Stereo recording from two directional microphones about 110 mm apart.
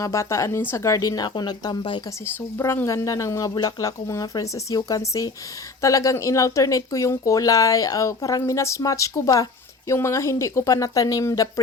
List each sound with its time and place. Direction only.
0.0 s speech: 25° left (ahead or behind); by 2.0 s 45° left (ahead or behind)
2.2 s speech: 25° left (ahead or behind)